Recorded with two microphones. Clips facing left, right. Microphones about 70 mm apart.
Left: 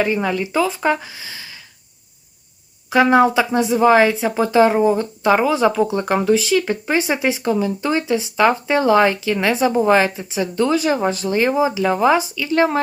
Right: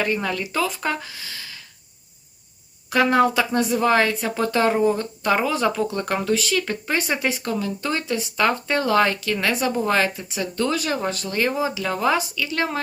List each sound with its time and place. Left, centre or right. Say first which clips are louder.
0.0 s speech: left 5 dB; centre
2.9 s speech: left 4 dB; centre